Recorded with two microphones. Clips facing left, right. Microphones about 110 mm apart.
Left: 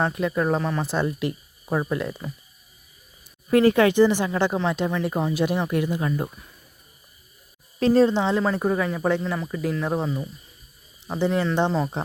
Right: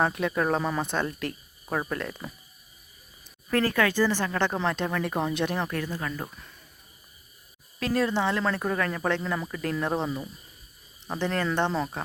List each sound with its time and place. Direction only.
0.0 s speech: centre (ahead or behind)
3.5 s speech: 20° left (ahead or behind)
7.8 s speech: 30° left (ahead or behind)
8.1 s speech: 15° left (ahead or behind)